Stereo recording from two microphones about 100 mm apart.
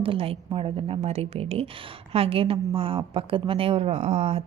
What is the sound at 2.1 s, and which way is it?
A woman's voice, 75° right (ahead or behind).